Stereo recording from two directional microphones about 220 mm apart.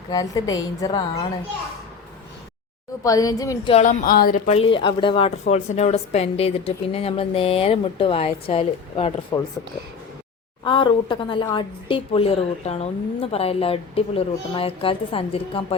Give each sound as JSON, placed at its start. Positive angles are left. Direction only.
{"t": 0.1, "sound": "a woman's voice", "side_deg": 15}
{"t": 3.0, "sound": "a woman's voice", "side_deg": 15}
{"t": 10.6, "sound": "a woman's voice", "side_deg": 20}